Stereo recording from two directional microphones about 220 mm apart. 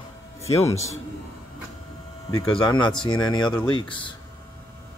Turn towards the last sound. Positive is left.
turn(degrees=20)  # may be behind; listen again after turning